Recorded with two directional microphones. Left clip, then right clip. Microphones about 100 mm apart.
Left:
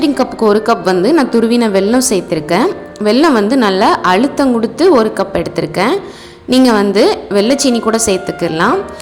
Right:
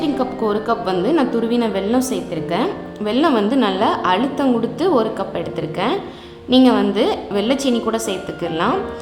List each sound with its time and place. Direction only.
0.0 s a woman's voice: 60° left (ahead or behind)